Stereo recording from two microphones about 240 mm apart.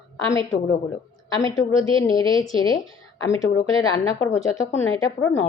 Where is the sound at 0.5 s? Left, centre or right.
Centre.